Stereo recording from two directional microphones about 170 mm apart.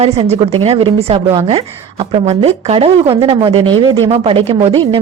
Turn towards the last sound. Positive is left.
turn(degrees=-35)  # may be behind; listen again after turning